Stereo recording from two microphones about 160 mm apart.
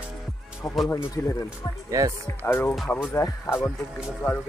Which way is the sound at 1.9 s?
20° right (ahead or behind).